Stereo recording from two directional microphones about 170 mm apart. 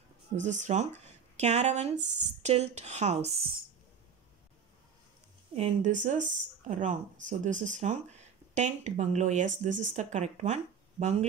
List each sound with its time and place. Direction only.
0.4 s speech: 45° right (ahead or behind)
2.0 s speech: 90° right
2.4 s speech: 40° right (ahead or behind)
5.6 s speech: 45° right (ahead or behind)